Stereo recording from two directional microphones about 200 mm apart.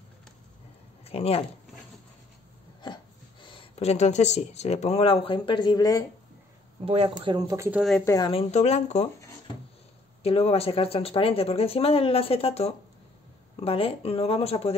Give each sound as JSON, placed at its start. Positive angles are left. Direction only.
{"t": 1.0, "sound": "speech", "side_deg": 30}
{"t": 2.8, "sound": "speech", "side_deg": 25}
{"t": 6.8, "sound": "speech", "side_deg": -30}
{"t": 8.0, "sound": "speech", "side_deg": 15}
{"t": 8.3, "sound": "speech", "side_deg": 30}
{"t": 10.2, "sound": "speech", "side_deg": 30}